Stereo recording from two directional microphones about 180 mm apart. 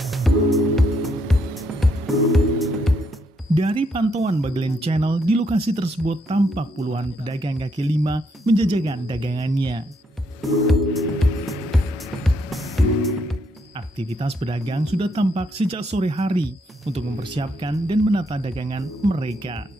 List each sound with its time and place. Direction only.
0.0 s music: centre (ahead or behind)
3.5 s speech: 30° right (ahead or behind)
7.2 s speech: 25° right (ahead or behind)
10.4 s music: centre (ahead or behind)
13.9 s speech: 35° right (ahead or behind)